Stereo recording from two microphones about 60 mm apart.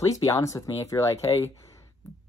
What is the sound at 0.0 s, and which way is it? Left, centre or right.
Speech, left.